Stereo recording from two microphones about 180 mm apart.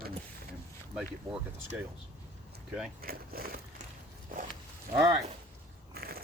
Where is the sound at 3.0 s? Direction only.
55° right (ahead or behind).